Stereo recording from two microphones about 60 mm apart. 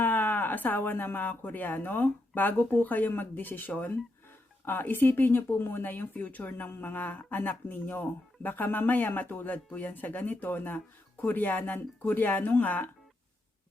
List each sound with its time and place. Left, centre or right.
0.0 s speech: left